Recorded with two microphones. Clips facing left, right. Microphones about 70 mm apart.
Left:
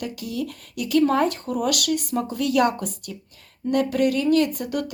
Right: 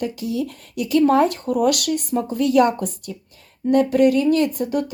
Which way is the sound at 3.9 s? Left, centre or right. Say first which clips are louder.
Right 6 dB; right.